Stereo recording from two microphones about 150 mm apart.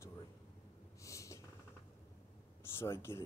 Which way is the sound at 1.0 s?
20° left (ahead or behind).